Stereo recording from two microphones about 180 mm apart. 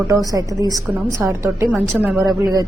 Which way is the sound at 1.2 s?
15° right (ahead or behind).